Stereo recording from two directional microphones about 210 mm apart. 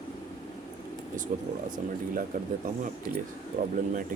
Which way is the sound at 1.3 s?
35° right (ahead or behind).